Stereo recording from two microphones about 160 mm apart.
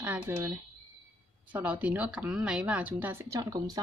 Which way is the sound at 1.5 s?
10° right (ahead or behind).